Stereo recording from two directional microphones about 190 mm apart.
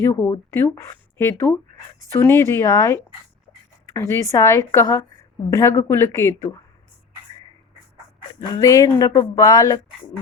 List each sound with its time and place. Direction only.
0.0 s speech: 10° left (ahead or behind)
8.5 s speech: 15° left (ahead or behind)